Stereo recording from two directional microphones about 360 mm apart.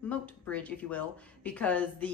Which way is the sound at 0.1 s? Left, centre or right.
Centre.